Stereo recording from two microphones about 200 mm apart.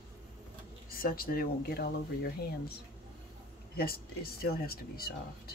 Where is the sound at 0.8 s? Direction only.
45° left (ahead or behind).